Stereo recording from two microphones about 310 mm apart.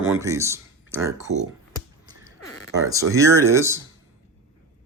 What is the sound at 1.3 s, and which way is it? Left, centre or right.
Speech, right.